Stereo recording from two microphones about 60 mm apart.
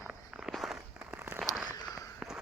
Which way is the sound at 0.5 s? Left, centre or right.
Centre.